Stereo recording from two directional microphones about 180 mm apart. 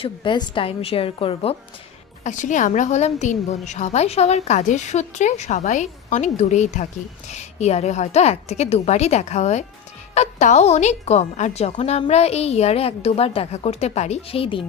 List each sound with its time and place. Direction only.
0.0 s a woman's voice: 25° left (ahead or behind)
2.2 s a woman's voice: 45° left (ahead or behind)